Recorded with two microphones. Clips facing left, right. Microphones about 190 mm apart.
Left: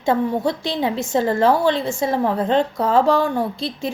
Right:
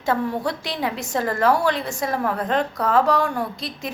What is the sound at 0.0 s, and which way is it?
A woman's voice, 25° left (ahead or behind).